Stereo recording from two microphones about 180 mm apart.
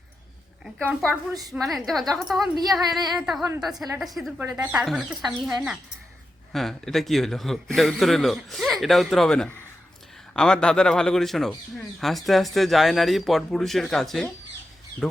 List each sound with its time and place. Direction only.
0.6 s a man's voice: 5° right (ahead or behind)
1.3 s a woman's voice: 20° right (ahead or behind)
1.5 s a man's voice: centre (ahead or behind)
4.4 s speech: 15° right (ahead or behind)
4.7 s a man's voice: centre (ahead or behind)